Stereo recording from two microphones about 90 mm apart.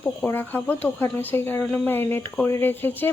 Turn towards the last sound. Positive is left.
turn(degrees=20)  # may be behind; listen again after turning